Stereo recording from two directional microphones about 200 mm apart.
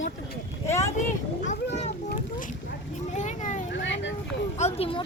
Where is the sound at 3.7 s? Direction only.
65° left (ahead or behind).